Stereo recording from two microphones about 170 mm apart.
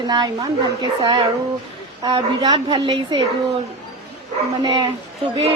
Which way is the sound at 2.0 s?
25° right (ahead or behind).